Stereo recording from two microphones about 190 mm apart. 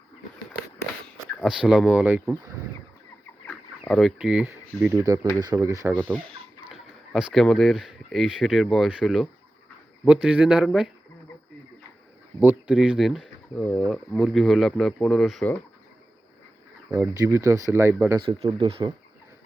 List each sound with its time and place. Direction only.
1.5 s speech: 5° right (ahead or behind)
3.4 s a sound: 5° left (ahead or behind)
4.8 s speech: 15° right (ahead or behind)
6.7 s speech: 5° right (ahead or behind)
12.4 s speech: 10° right (ahead or behind)
16.9 s speech: 15° right (ahead or behind)
18.2 s speech: 30° right (ahead or behind)